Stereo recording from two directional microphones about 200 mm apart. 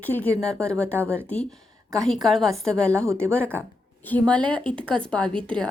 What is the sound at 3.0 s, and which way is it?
Speech, 15° right (ahead or behind).